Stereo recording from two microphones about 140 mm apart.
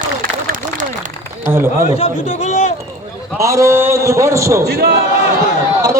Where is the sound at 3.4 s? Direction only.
20° right (ahead or behind).